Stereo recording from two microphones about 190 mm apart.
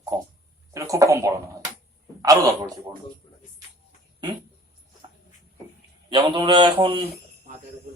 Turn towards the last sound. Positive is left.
turn(degrees=-25)  # may be behind; listen again after turning